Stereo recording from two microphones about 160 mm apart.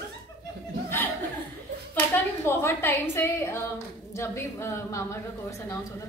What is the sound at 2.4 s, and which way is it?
A woman's voice, 15° left (ahead or behind).